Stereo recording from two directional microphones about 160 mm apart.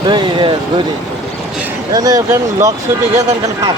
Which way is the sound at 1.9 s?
20° right (ahead or behind).